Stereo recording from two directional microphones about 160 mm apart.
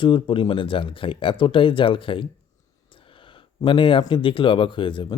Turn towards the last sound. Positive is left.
turn(degrees=30)  # may be behind; listen again after turning